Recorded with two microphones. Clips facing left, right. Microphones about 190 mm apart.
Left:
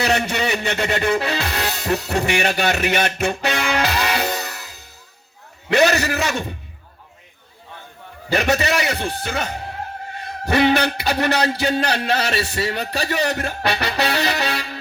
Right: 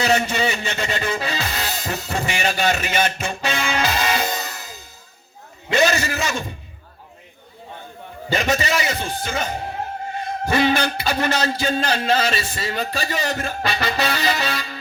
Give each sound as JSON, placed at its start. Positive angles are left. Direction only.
{"t": 0.0, "sound": "music", "side_deg": 65}
{"t": 5.7, "sound": "a man's voice", "side_deg": 65}
{"t": 8.3, "sound": "a man's voice", "side_deg": 65}